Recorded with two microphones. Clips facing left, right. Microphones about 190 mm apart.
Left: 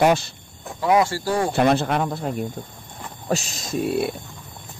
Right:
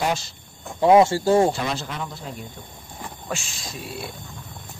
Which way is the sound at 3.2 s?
40° left (ahead or behind).